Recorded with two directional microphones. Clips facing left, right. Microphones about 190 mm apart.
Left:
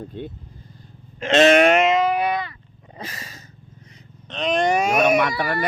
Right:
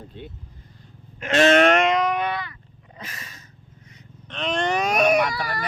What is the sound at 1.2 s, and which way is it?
Sheep, 25° left (ahead or behind).